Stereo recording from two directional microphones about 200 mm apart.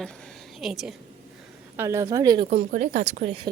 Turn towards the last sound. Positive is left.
turn(degrees=-30)  # may be behind; listen again after turning